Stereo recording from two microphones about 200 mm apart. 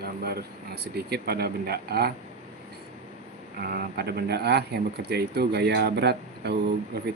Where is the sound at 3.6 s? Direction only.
50° right (ahead or behind).